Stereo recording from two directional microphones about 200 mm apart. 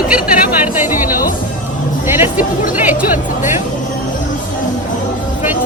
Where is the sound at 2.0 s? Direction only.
10° right (ahead or behind).